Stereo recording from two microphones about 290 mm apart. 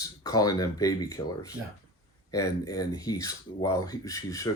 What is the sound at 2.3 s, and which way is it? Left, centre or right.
Speech, centre.